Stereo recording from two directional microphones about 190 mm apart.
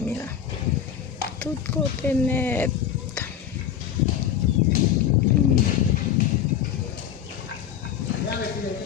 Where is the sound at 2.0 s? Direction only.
10° left (ahead or behind).